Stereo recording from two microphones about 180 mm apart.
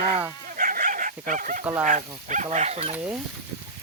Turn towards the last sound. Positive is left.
turn(degrees=-10)  # may be behind; listen again after turning